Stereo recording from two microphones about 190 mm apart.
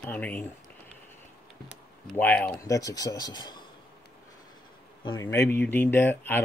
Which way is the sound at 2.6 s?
20° left (ahead or behind).